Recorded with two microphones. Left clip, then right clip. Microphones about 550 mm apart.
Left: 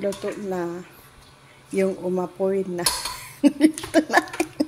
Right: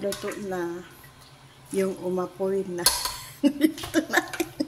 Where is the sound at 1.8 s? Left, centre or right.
Right.